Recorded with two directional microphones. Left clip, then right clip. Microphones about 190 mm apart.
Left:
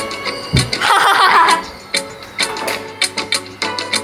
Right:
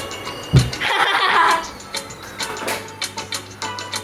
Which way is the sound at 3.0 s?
45° left (ahead or behind).